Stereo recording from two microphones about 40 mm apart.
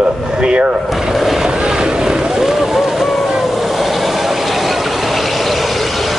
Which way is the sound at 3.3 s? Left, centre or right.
Centre.